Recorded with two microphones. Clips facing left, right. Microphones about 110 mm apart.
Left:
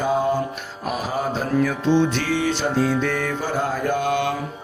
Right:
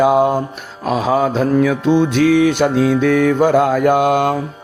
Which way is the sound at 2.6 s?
60° right (ahead or behind).